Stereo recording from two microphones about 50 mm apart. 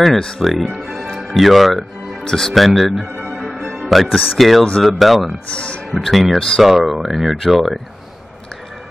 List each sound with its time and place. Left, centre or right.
0.4 s speech: centre
0.8 s music: centre
2.2 s speech: centre
2.5 s speech: centre
3.3 s music: centre
4.8 s speech: centre